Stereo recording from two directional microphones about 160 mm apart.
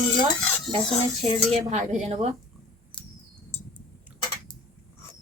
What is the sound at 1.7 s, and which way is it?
Speech, 45° right (ahead or behind).